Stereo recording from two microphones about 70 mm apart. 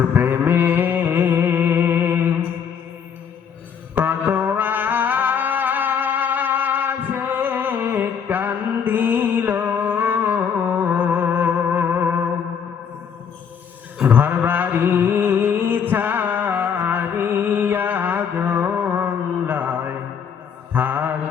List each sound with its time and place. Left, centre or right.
0.1 s music: right
3.9 s music: right
14.0 s mantra: right
20.7 s mantra: right